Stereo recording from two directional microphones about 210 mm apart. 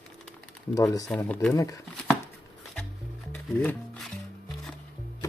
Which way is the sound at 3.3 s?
10° left (ahead or behind).